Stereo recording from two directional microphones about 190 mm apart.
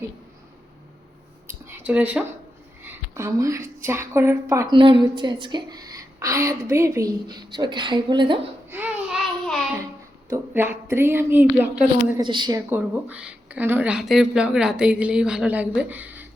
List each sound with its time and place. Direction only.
1.5 s a sound: 10° right (ahead or behind)
3.8 s a woman's voice: 15° right (ahead or behind)
8.7 s babbling: 10° right (ahead or behind)
10.2 s a woman's voice: 15° right (ahead or behind)
12.1 s a woman's voice: 25° right (ahead or behind)